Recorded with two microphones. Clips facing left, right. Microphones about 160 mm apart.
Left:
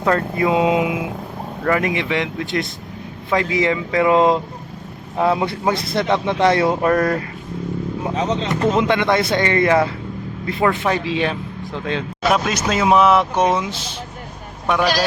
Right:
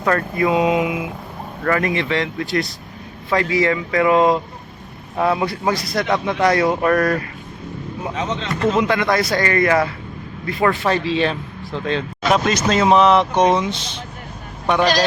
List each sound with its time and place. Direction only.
0.0 s speech: 20° left (ahead or behind)
8.0 s speech: 30° left (ahead or behind)
8.4 s speech: 20° left (ahead or behind); by 15.0 s 5° left (ahead or behind)